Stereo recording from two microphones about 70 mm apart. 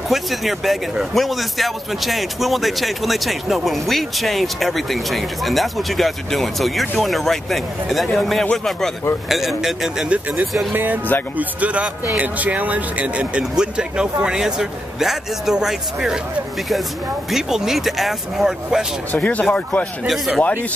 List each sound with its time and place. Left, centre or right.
0.1 s speech: centre
10.7 s speech: right
11.3 s a man's voice: centre
17.3 s speech: centre
19.1 s speech: left
20.1 s speech: centre